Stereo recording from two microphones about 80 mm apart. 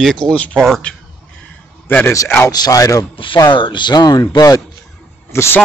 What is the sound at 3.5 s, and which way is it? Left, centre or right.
Speech, left.